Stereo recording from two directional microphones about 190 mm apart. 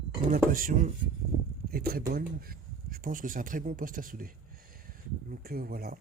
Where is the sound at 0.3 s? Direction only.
45° right (ahead or behind).